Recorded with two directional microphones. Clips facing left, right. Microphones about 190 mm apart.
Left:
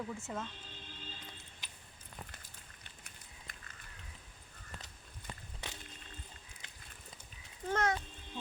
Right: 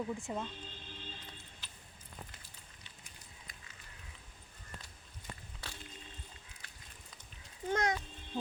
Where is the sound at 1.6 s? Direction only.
15° left (ahead or behind).